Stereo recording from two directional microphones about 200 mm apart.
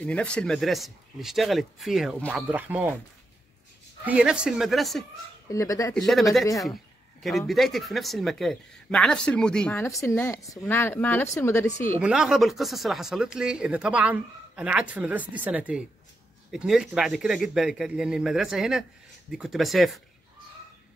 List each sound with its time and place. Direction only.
0.0 s speech: 5° left (ahead or behind)
4.0 s speech: 5° right (ahead or behind)
5.5 s speech: 15° left (ahead or behind)
5.9 s speech: centre (ahead or behind)
7.2 s speech: centre (ahead or behind)
12.0 s speech: 5° right (ahead or behind)